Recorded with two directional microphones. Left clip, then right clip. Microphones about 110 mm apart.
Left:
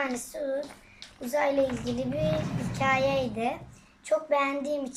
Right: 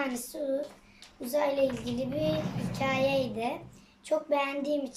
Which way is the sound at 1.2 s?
15° right (ahead or behind).